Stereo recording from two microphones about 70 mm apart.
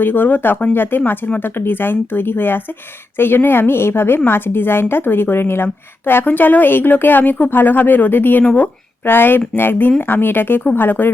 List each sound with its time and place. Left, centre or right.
0.0 s a woman's voice: left